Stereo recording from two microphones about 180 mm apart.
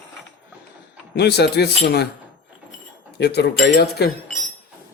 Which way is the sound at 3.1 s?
65° left (ahead or behind).